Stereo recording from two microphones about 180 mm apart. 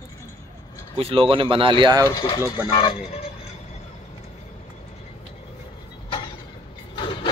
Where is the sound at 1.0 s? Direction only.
30° right (ahead or behind).